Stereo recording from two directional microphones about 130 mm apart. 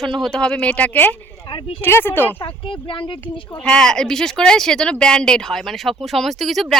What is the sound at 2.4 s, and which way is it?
Speech, 40° left (ahead or behind).